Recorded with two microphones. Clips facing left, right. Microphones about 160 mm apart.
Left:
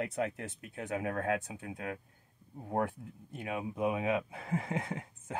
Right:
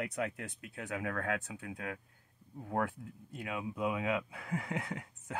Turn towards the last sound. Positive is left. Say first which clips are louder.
# left 2 dB
turn(degrees=25)  # may be behind; listen again after turning